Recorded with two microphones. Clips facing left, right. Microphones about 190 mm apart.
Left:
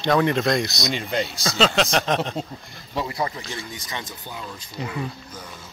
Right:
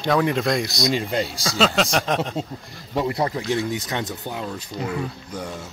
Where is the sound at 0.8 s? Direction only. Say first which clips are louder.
Right 3 dB; 35° right (ahead or behind).